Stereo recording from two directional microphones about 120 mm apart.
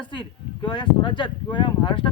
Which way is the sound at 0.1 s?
40° left (ahead or behind).